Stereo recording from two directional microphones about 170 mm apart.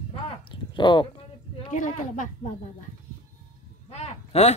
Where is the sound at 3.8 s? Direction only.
40° left (ahead or behind).